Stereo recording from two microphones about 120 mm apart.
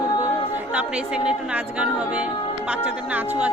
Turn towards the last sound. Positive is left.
turn(degrees=-15)  # may be behind; listen again after turning